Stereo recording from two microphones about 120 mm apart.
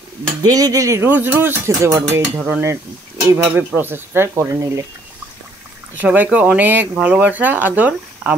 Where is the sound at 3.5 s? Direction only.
15° right (ahead or behind).